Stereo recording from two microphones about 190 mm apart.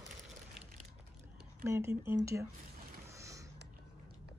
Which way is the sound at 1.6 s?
15° right (ahead or behind).